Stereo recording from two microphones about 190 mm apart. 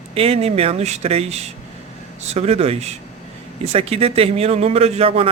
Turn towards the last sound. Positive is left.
turn(degrees=-30)  # may be behind; listen again after turning